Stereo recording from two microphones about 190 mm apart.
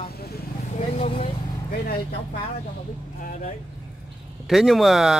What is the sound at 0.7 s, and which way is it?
Vehicle, 35° left (ahead or behind).